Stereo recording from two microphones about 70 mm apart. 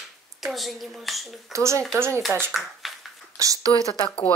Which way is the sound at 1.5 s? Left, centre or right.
Right.